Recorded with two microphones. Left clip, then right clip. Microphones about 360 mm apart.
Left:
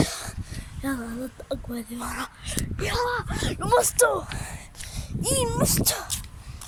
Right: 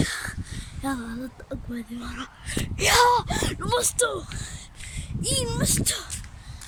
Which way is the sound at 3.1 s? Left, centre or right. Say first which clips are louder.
Right 6 dB; centre.